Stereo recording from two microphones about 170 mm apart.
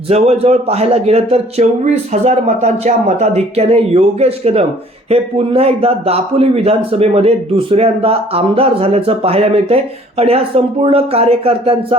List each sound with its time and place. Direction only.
0.1 s a man's voice: 40° right (ahead or behind)